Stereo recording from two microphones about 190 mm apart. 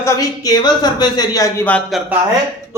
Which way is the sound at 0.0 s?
20° left (ahead or behind).